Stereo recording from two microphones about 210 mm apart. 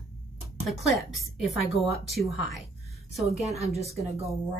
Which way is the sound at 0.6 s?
Centre (ahead or behind).